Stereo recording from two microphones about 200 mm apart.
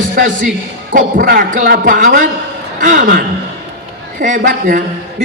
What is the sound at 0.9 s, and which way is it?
A woman's voice, 45° right (ahead or behind).